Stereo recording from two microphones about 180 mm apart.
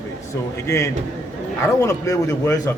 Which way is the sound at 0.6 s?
15° left (ahead or behind).